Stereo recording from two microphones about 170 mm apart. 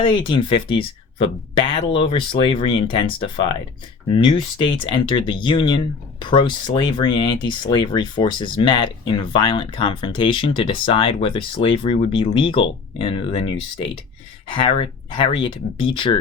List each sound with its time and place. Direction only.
0.0 s speech: 30° left (ahead or behind)